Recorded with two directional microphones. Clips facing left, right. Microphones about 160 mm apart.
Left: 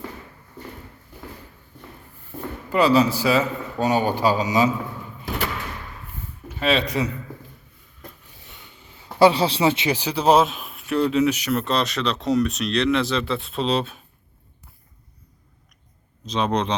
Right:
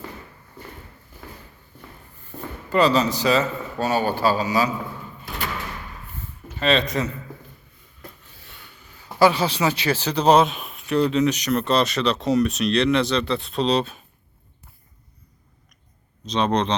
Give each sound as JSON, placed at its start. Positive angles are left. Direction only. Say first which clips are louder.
{"t": 2.6, "sound": "a man's voice", "louder": "left 1 dB", "side_deg": 10}
{"t": 6.6, "sound": "a man's voice", "louder": "even", "side_deg": 10}
{"t": 8.4, "sound": "speech", "louder": "even", "side_deg": 20}
{"t": 16.2, "sound": "speech", "louder": "right 1 dB", "side_deg": 5}